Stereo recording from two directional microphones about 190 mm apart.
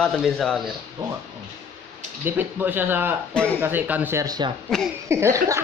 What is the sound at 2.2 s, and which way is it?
A woman's voice, 10° right (ahead or behind).